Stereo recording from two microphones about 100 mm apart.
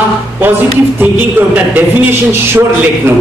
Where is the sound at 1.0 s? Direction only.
15° right (ahead or behind).